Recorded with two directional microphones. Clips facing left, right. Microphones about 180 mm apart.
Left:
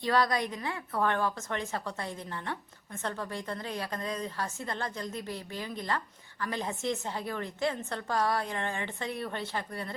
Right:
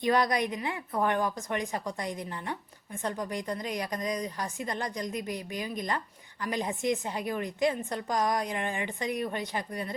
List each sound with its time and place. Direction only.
0.0 s a woman's voice: 20° right (ahead or behind)